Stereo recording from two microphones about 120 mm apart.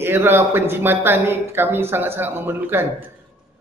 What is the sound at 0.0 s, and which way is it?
A man's voice, 20° right (ahead or behind).